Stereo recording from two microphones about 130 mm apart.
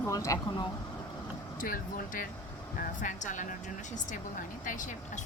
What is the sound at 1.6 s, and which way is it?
Speech, 90° left.